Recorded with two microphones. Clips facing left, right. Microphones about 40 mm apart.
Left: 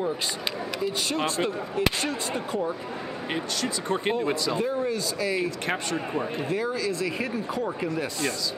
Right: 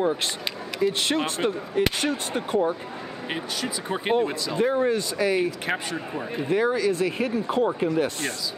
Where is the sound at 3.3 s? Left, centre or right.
Centre.